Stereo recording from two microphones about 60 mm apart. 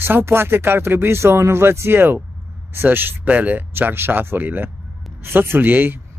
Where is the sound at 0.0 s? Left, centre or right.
Right.